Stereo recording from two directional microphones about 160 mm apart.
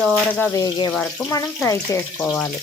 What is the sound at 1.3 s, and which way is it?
Speech, 20° left (ahead or behind).